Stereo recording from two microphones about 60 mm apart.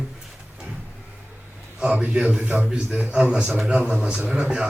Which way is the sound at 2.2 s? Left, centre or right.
Right.